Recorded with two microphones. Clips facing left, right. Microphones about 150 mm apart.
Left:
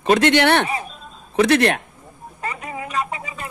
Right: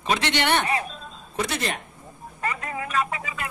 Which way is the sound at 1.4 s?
70° left (ahead or behind).